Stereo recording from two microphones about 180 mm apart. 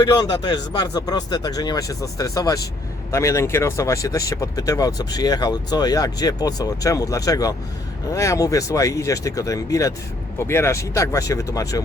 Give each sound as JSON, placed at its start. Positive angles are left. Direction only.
{"t": 0.0, "sound": "speech", "side_deg": 20}